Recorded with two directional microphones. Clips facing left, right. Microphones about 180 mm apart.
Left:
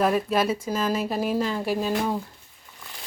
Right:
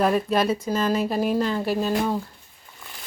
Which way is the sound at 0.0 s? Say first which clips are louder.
Right 1 dB; 5° left (ahead or behind).